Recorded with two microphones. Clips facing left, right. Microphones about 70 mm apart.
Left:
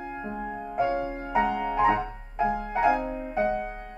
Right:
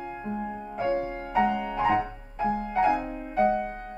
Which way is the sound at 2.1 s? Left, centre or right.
Left.